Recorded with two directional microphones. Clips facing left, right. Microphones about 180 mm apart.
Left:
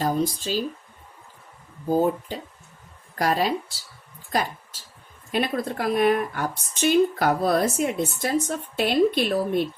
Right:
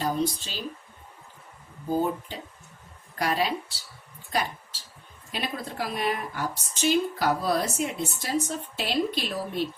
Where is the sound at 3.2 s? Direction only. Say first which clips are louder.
Left 4 dB; 45° left (ahead or behind).